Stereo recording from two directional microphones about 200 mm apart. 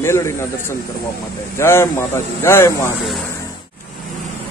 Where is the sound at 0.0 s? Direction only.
15° left (ahead or behind).